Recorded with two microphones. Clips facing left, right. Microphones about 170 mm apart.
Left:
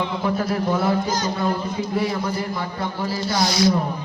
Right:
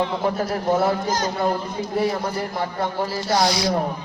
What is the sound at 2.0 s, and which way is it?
A man's voice, 40° right (ahead or behind).